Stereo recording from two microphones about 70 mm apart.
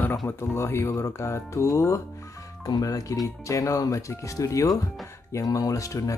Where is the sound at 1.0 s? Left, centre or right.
Left.